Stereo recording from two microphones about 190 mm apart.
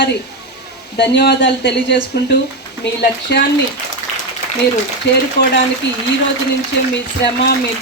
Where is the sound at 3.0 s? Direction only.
60° left (ahead or behind).